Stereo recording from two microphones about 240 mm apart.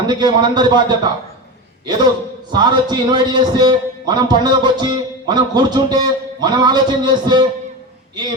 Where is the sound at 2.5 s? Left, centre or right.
Centre.